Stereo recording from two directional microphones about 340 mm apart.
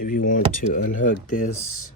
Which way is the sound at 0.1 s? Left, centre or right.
Left.